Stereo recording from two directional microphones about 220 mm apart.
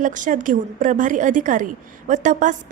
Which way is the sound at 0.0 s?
35° right (ahead or behind).